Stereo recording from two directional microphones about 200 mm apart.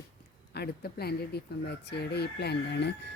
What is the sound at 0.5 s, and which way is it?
Speech, 55° left (ahead or behind).